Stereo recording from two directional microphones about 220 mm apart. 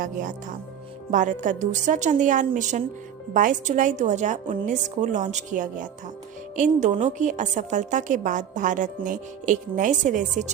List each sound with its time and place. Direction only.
0.0 s a woman's voice: 40° right (ahead or behind)